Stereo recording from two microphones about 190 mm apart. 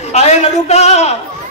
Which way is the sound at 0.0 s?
35° left (ahead or behind).